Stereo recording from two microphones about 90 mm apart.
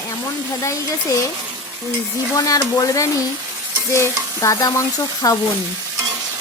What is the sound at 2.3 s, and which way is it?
Speech, 40° left (ahead or behind).